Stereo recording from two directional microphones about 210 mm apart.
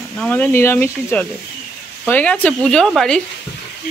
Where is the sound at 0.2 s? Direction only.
5° left (ahead or behind).